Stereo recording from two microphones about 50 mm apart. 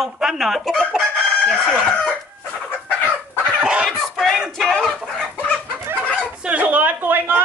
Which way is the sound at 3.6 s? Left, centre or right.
Centre.